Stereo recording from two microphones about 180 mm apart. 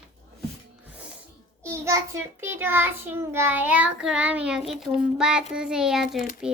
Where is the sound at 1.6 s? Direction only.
15° right (ahead or behind).